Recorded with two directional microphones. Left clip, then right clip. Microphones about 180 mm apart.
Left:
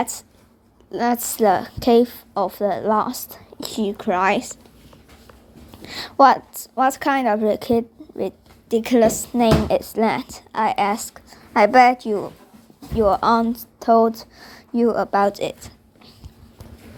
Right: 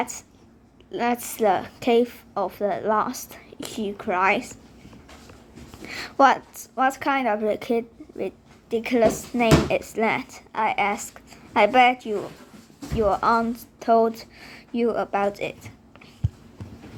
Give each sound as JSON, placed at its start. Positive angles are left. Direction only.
{"t": 0.0, "sound": "a woman's voice", "side_deg": 35}
{"t": 5.8, "sound": "a woman's voice", "side_deg": 25}
{"t": 6.7, "sound": "a woman's voice", "side_deg": 40}
{"t": 8.7, "sound": "a woman's voice", "side_deg": 50}
{"t": 9.3, "sound": "a woman's voice", "side_deg": 30}
{"t": 13.7, "sound": "speech", "side_deg": 25}